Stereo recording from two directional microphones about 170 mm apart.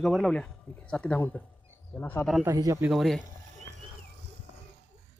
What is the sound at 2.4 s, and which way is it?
Speech, 20° right (ahead or behind).